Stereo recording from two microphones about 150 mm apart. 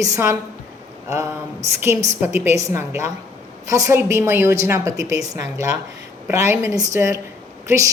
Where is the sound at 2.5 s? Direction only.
20° right (ahead or behind).